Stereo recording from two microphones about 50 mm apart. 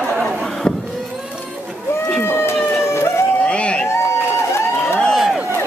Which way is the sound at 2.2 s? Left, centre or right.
Left.